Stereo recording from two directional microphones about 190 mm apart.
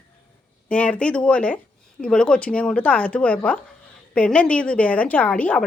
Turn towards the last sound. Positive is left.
turn(degrees=5)  # may be behind; listen again after turning